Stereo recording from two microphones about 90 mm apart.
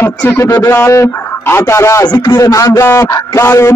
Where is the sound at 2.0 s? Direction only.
50° left (ahead or behind).